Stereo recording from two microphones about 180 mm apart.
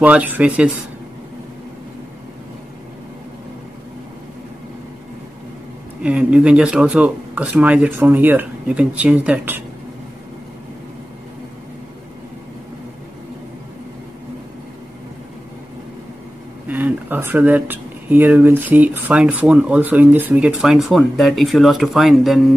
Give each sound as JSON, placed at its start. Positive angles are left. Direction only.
{"t": 0.0, "sound": "speech", "side_deg": -10}
{"t": 6.0, "sound": "speech", "side_deg": -5}
{"t": 16.6, "sound": "speech", "side_deg": -10}